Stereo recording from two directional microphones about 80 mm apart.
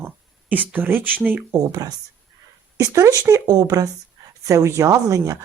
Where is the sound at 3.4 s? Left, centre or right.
Right.